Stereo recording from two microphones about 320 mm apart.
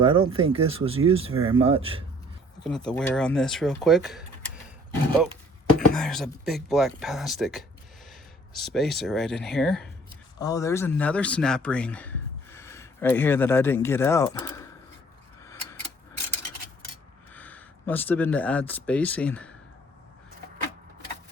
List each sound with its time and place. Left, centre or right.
0.0 s speech: centre
2.6 s speech: centre
5.9 s speech: centre
17.3 s speech: centre